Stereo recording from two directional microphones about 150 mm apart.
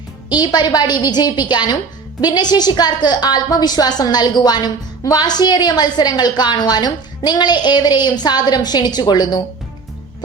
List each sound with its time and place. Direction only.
0.3 s a woman's voice: 30° left (ahead or behind)